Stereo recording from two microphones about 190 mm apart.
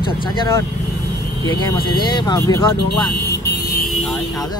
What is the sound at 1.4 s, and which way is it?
Speech, 20° left (ahead or behind).